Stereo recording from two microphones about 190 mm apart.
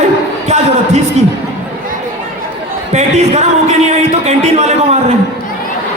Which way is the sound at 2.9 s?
35° right (ahead or behind).